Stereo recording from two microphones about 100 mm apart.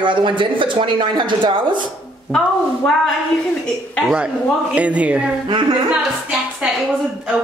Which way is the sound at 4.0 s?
5° right (ahead or behind).